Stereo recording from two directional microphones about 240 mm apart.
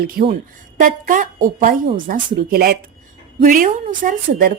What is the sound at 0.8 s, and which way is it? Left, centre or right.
A woman's voice, right.